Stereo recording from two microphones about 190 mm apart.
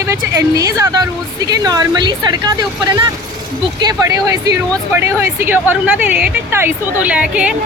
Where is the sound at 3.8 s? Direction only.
20° right (ahead or behind).